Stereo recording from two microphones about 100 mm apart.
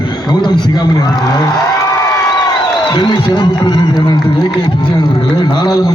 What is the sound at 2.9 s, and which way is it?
Speech, 50° left (ahead or behind).